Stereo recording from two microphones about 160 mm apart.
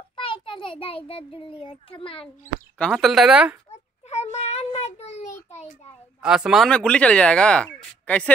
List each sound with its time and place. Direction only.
0.1 s a child's voice: 30° left (ahead or behind)
2.2 s speech: 5° left (ahead or behind)
4.1 s child singing: 45° left (ahead or behind)
6.2 s speech: 5° right (ahead or behind)